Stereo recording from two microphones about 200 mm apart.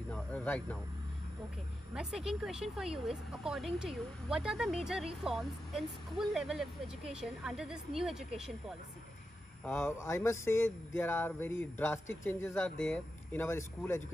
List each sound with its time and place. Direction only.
0.1 s speech: 5° left (ahead or behind)
2.0 s speech: centre (ahead or behind)
9.7 s speech: 10° left (ahead or behind)